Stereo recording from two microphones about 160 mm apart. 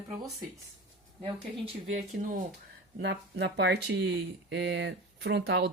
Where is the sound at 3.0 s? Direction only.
90° right.